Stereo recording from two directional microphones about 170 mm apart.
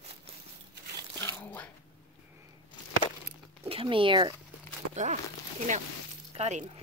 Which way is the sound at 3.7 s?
30° right (ahead or behind).